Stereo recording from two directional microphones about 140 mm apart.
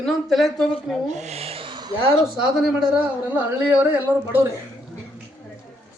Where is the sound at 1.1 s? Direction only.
50° right (ahead or behind); by 1.9 s 30° right (ahead or behind).